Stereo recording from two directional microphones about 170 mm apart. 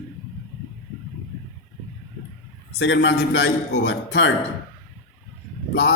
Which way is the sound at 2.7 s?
90° left.